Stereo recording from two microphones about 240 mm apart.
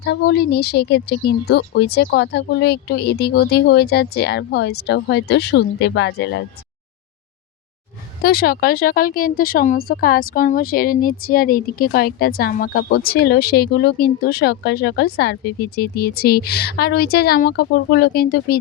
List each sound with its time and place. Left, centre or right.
0.0 s speech: left
8.2 s speech: left